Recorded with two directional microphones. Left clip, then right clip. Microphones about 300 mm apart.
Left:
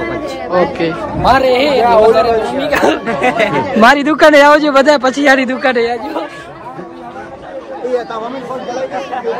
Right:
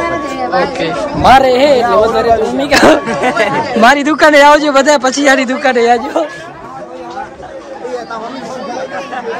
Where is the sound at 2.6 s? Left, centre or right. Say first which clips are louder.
Right 7 dB; right.